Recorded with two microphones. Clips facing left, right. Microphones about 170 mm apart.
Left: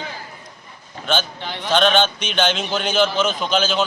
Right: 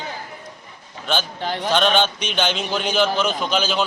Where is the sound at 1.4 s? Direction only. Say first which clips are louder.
Right 4 dB; 40° right (ahead or behind).